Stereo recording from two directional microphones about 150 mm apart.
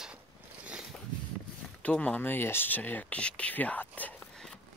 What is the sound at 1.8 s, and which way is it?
Speech, 10° left (ahead or behind).